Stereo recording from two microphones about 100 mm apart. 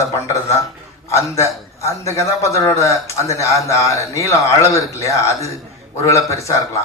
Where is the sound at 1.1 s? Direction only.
30° left (ahead or behind).